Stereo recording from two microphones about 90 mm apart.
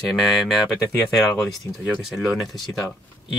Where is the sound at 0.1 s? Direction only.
Centre (ahead or behind).